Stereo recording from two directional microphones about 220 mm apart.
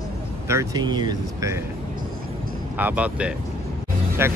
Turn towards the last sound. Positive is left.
turn(degrees=-10)  # may be behind; listen again after turning